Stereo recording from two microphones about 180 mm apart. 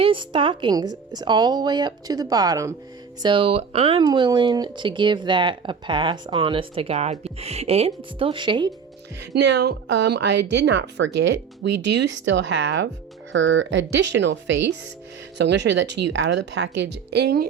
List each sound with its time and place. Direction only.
0.0 s speech: 30° right (ahead or behind)
3.2 s speech: 30° right (ahead or behind)
9.3 s speech: 70° right (ahead or behind)
13.3 s speech: 90° right; by 17.4 s 65° right (ahead or behind)